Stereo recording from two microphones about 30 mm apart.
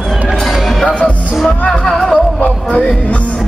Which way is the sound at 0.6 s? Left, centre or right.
Centre.